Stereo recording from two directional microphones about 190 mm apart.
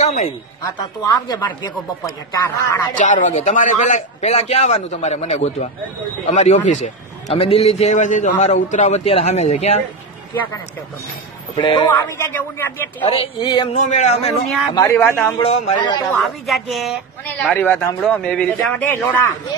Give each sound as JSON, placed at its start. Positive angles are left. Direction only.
{"t": 0.6, "sound": "speech", "side_deg": 20}
{"t": 3.0, "sound": "a man's voice", "side_deg": 40}
{"t": 11.5, "sound": "speech", "side_deg": 25}
{"t": 12.2, "sound": "a man's voice", "side_deg": 10}
{"t": 13.0, "sound": "speech", "side_deg": 30}
{"t": 13.7, "sound": "a man's voice", "side_deg": 40}
{"t": 14.7, "sound": "speech", "side_deg": 20}
{"t": 15.0, "sound": "a man's voice", "side_deg": 10}
{"t": 15.3, "sound": "speech", "side_deg": 30}
{"t": 16.2, "sound": "speech", "side_deg": 0}